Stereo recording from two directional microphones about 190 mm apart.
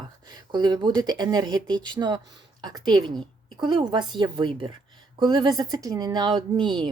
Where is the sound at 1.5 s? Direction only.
5° left (ahead or behind).